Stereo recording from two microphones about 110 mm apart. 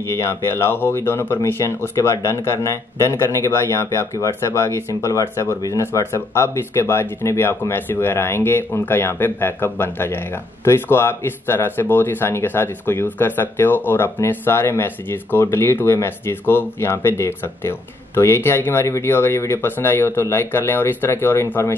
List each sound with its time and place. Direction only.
0.1 s speech: 25° left (ahead or behind)